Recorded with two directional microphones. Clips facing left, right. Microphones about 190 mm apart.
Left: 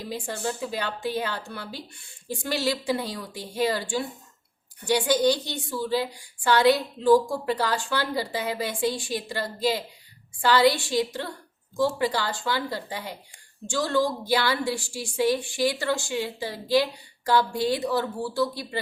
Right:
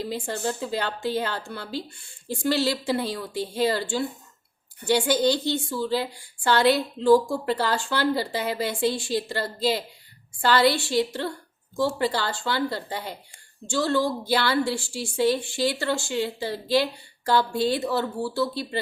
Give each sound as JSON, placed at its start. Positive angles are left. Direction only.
{"t": 0.1, "sound": "a woman's voice", "side_deg": 15}